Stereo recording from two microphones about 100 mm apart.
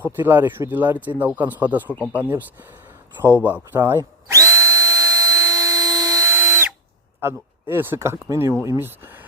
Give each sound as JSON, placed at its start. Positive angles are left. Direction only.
{"t": 0.0, "sound": "speech", "side_deg": -20}
{"t": 3.4, "sound": "speech", "side_deg": -15}
{"t": 3.8, "sound": "drill", "side_deg": -25}
{"t": 7.2, "sound": "speech", "side_deg": -25}